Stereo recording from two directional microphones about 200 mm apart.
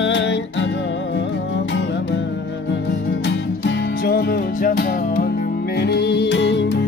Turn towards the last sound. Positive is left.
turn(degrees=60)  # may be behind; listen again after turning